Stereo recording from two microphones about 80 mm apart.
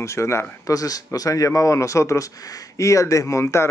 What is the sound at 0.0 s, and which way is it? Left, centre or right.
Speech, left.